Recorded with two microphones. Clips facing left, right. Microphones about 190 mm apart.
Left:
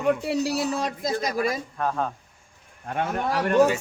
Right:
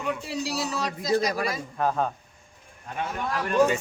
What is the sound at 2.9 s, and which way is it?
Speech, 55° left (ahead or behind).